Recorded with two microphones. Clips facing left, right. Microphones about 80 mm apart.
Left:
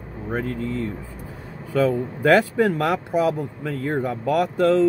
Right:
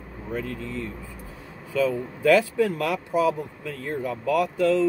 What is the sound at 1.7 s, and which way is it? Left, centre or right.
Speech, left.